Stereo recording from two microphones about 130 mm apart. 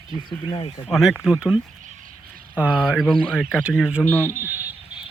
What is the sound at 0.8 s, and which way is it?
Speech, centre (ahead or behind).